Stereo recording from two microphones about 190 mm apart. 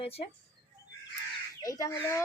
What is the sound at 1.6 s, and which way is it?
Speech, 15° left (ahead or behind).